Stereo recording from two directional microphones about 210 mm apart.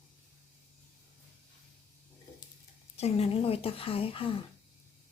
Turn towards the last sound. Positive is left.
turn(degrees=25)  # may be behind; listen again after turning